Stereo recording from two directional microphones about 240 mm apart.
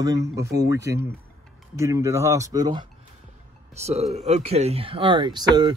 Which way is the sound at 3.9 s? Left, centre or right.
Right.